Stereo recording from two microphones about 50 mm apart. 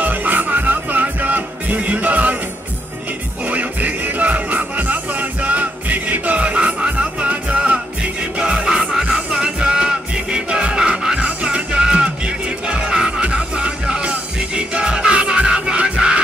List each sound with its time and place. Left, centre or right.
0.0 s music: right
3.4 s music: right; by 11.1 s centre
11.1 s music: right